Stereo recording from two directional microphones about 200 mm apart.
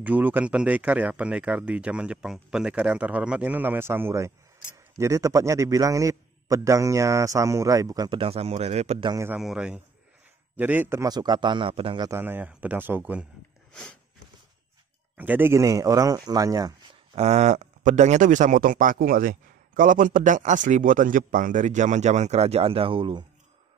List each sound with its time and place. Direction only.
0.0 s speech: 10° right (ahead or behind); by 9.1 s 30° right (ahead or behind)
9.1 s a man's voice: 15° right (ahead or behind)
15.1 s speech: 10° right (ahead or behind)
17.2 s speech: 35° right (ahead or behind)